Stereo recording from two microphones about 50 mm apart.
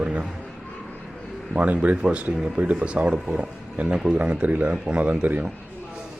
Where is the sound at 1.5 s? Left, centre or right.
Right.